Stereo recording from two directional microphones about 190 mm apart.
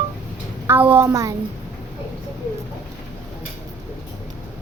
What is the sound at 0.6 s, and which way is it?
Speech, 10° right (ahead or behind).